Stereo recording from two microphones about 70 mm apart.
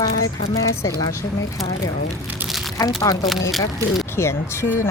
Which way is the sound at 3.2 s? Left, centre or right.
Centre.